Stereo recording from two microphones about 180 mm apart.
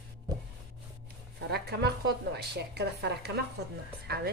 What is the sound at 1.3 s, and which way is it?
A woman's voice, 60° right (ahead or behind).